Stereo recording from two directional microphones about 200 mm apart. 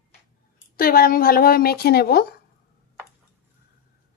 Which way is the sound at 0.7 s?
45° left (ahead or behind).